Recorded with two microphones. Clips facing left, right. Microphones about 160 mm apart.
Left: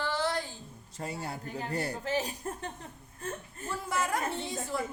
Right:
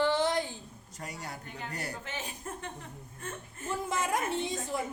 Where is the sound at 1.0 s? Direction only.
25° left (ahead or behind).